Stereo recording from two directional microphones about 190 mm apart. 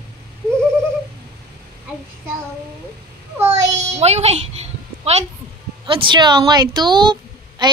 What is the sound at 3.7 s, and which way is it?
A woman's voice, 35° right (ahead or behind).